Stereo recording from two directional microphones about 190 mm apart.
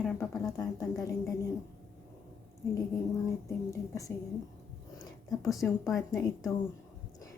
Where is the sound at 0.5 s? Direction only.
20° left (ahead or behind).